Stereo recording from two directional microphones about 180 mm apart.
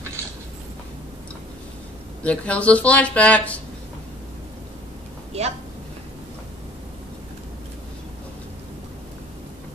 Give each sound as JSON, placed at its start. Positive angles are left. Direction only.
{"t": 2.2, "sound": "speech", "side_deg": 5}
{"t": 5.3, "sound": "speech", "side_deg": -35}